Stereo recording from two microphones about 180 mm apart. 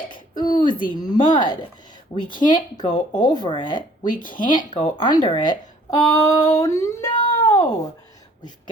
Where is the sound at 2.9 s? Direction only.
45° left (ahead or behind).